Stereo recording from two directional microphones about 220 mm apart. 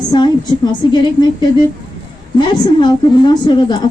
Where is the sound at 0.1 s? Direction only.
20° left (ahead or behind).